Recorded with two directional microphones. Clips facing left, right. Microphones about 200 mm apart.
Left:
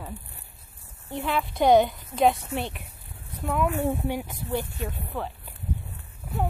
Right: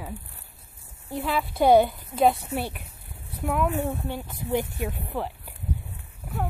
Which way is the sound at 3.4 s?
5° right (ahead or behind).